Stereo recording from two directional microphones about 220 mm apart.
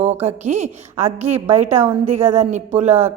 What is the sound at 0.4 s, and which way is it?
Speech, 30° right (ahead or behind).